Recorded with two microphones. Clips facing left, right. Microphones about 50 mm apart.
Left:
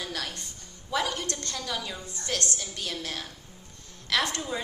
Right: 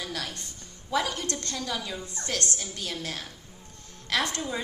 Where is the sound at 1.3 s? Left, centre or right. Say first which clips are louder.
Right 1 dB; right.